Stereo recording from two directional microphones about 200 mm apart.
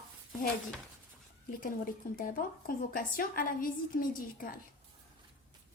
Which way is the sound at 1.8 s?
45° left (ahead or behind).